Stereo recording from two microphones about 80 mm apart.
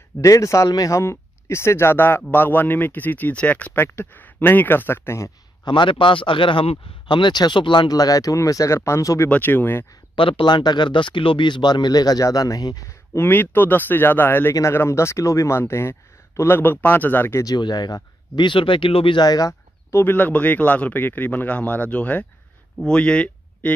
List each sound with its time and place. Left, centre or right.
0.2 s speech: left
5.7 s speech: left
7.1 s speech: left
7.9 s speech: left
9.3 s speech: left
10.1 s speech: left
13.3 s speech: left
17.6 s speech: left
19.2 s speech: left
19.9 s speech: left